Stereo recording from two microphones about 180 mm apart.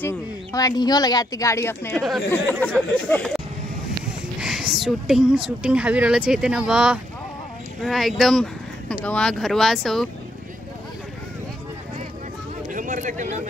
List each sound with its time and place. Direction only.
0.0 s speech: 20° left (ahead or behind)
2.0 s speech: centre (ahead or behind)
12.7 s a sound: 45° right (ahead or behind)